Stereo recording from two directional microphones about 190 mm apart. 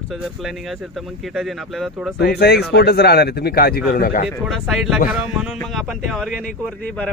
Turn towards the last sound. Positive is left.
turn(degrees=5)  # may be behind; listen again after turning